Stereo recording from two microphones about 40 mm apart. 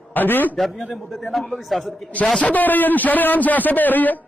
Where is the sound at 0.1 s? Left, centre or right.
Left.